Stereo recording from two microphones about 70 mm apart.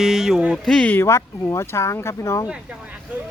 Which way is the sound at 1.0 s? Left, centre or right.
Left.